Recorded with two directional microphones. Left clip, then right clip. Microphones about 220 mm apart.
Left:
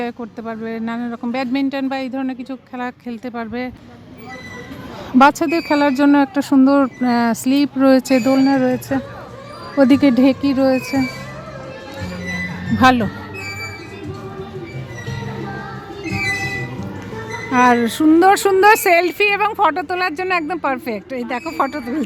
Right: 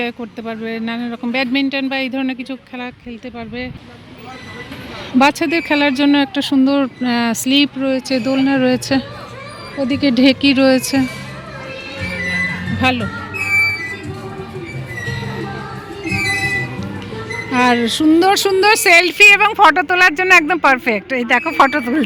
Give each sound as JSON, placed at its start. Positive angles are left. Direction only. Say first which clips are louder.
{"t": 0.0, "sound": "speech", "louder": "right 2 dB", "side_deg": 0}
{"t": 2.8, "sound": "speech", "louder": "left 2 dB", "side_deg": 15}
{"t": 5.1, "sound": "speech", "louder": "left 1 dB", "side_deg": 5}
{"t": 7.8, "sound": "speech", "louder": "left 5 dB", "side_deg": 20}
{"t": 8.1, "sound": "speech", "louder": "left 1 dB", "side_deg": 10}
{"t": 9.7, "sound": "speech", "louder": "left 7 dB", "side_deg": 25}
{"t": 10.0, "sound": "speech", "louder": "right 1 dB", "side_deg": 5}
{"t": 12.8, "sound": "speech", "louder": "left 4 dB", "side_deg": 25}
{"t": 16.0, "sound": "music", "louder": "right 4 dB", "side_deg": -45}
{"t": 17.5, "sound": "speech", "louder": "left 1 dB", "side_deg": 5}